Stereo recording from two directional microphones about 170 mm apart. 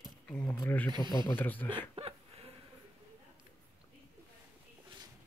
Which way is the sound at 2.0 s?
35° right (ahead or behind).